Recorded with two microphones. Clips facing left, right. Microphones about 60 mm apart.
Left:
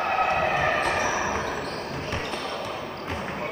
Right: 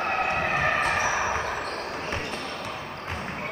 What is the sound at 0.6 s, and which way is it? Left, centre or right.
Basketball bounce, centre.